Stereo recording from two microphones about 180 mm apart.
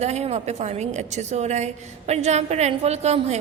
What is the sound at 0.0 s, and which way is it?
A woman's voice, 35° right (ahead or behind).